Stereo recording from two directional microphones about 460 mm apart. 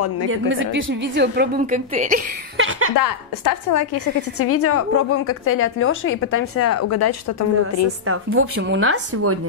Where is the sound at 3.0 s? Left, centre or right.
Left.